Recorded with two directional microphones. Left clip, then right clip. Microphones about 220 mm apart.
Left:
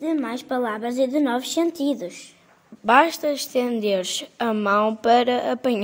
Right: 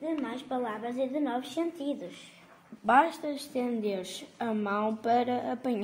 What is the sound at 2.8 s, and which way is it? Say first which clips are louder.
A woman's voice: left 7 dB; 45° left (ahead or behind).